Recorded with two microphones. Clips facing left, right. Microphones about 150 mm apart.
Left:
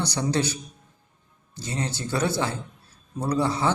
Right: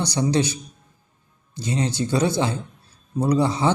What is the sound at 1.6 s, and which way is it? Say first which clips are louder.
A man's voice: right 6 dB; 15° right (ahead or behind).